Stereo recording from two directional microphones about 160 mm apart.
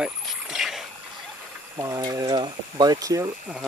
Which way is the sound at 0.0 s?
5° right (ahead or behind).